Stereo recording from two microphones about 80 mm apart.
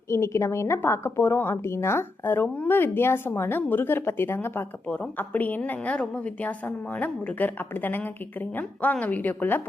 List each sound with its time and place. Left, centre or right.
0.1 s a woman's voice: left